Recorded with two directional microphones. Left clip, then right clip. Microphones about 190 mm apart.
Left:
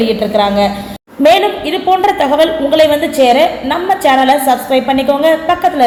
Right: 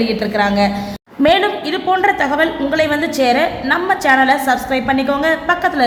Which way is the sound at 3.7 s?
15° left (ahead or behind).